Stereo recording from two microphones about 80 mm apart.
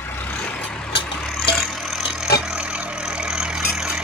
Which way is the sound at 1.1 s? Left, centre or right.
Centre.